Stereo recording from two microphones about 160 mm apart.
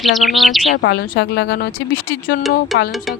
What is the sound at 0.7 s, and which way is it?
A woman's voice, 75° left (ahead or behind).